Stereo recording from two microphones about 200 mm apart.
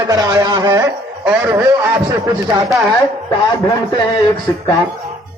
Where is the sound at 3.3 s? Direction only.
25° left (ahead or behind).